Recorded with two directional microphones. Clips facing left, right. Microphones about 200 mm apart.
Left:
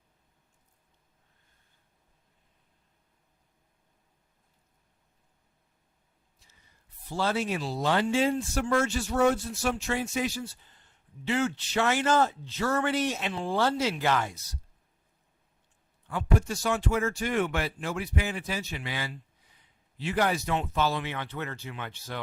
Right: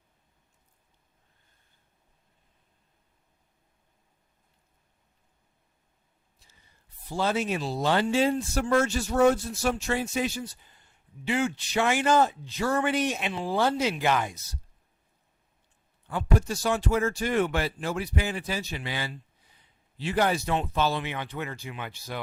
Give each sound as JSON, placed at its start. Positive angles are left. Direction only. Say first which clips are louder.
{"t": 7.1, "sound": "speech", "louder": "right 2 dB", "side_deg": -15}
{"t": 10.3, "sound": "speech", "louder": "right 1 dB", "side_deg": -15}
{"t": 16.0, "sound": "speech", "louder": "right 1 dB", "side_deg": -35}
{"t": 21.1, "sound": "speech", "louder": "right 1 dB", "side_deg": -15}